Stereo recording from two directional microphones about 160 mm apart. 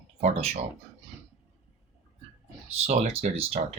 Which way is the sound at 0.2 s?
45° right (ahead or behind).